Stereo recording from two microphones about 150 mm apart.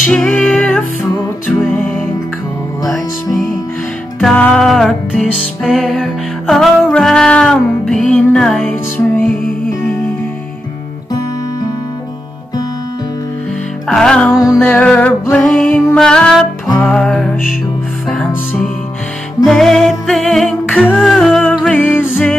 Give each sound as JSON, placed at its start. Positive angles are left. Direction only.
{"t": 0.1, "sound": "music", "side_deg": 5}
{"t": 2.8, "sound": "music", "side_deg": 0}
{"t": 13.8, "sound": "music", "side_deg": 5}
{"t": 14.3, "sound": "music", "side_deg": 20}
{"t": 14.6, "sound": "music", "side_deg": 5}